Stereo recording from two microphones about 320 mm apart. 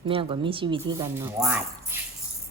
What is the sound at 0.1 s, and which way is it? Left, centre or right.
A woman's voice, centre.